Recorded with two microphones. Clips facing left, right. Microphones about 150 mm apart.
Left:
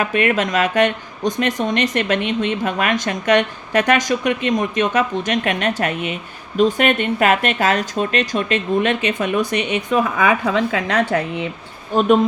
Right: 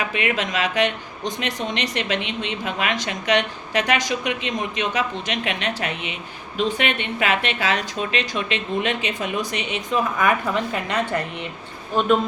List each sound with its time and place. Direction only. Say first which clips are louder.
0.0 s speech: left 6 dB; 50° left (ahead or behind)
10.4 s speech: left 5 dB; 90° left